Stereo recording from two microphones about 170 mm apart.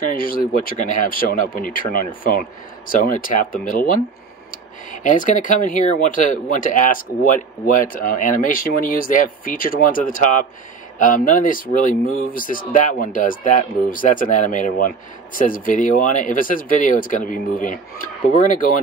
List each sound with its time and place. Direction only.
0.1 s speech: 55° left (ahead or behind)